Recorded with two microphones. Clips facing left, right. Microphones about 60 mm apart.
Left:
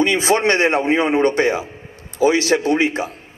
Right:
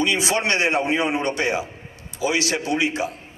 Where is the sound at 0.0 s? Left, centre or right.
Left.